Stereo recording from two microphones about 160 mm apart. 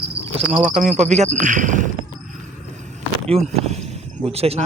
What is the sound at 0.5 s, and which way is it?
Speech, 50° right (ahead or behind).